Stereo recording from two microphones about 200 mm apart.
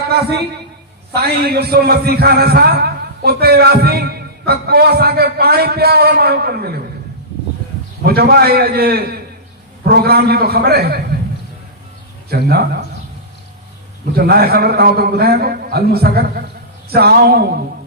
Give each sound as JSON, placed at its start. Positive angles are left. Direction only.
{"t": 0.1, "sound": "a man's voice", "side_deg": -55}
{"t": 8.0, "sound": "a man's voice", "side_deg": -50}
{"t": 12.3, "sound": "a man's voice", "side_deg": -50}
{"t": 14.2, "sound": "a man's voice", "side_deg": -50}